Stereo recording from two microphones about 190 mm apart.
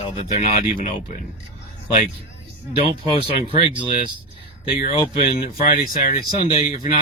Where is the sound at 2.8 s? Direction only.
55° left (ahead or behind).